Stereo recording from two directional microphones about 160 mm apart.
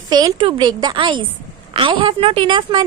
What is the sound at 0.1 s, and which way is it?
A woman's voice, 25° right (ahead or behind).